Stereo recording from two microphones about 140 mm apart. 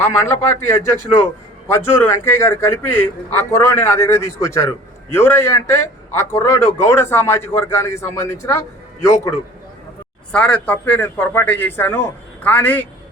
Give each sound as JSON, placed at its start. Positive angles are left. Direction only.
{"t": 0.0, "sound": "a man's voice", "side_deg": 15}
{"t": 10.3, "sound": "a man's voice", "side_deg": 10}